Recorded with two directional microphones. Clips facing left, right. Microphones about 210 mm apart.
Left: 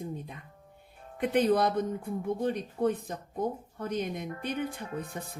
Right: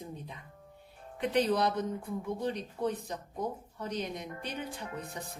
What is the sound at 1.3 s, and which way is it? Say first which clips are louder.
A woman's voice: left 3 dB; 55° left (ahead or behind).